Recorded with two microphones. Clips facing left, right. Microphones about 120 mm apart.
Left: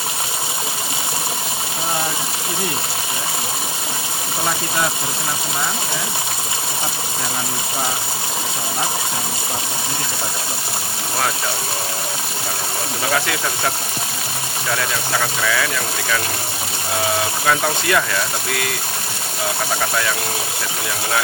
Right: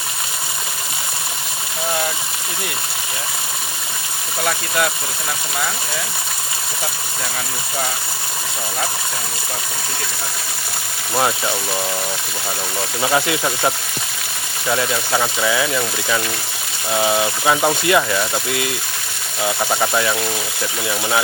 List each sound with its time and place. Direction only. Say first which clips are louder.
14.7 s speech: right 3 dB; 20° right (ahead or behind)
17.4 s speech: right 2 dB; 15° right (ahead or behind)